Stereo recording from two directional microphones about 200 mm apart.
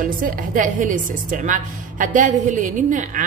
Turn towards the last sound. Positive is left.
turn(degrees=-40)  # may be behind; listen again after turning